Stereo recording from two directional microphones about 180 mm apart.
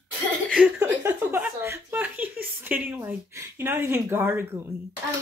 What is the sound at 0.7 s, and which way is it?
A woman's voice, 15° right (ahead or behind).